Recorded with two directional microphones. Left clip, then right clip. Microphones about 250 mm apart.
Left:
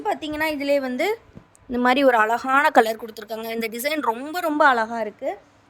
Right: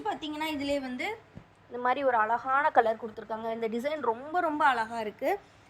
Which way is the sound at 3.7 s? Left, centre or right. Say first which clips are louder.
Left 8 dB; left.